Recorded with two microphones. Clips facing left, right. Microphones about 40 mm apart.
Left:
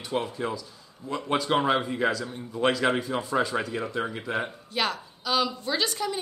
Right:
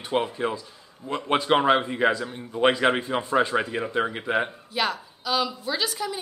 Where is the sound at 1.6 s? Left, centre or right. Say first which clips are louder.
Right 4 dB; centre.